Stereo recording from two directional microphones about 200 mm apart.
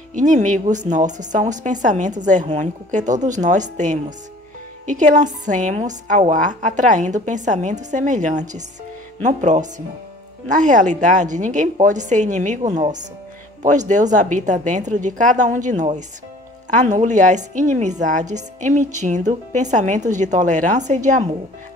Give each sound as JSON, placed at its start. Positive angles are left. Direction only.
{"t": 0.1, "sound": "a woman's voice", "side_deg": -40}